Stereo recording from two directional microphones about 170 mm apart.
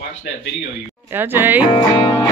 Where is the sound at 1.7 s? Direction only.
30° left (ahead or behind).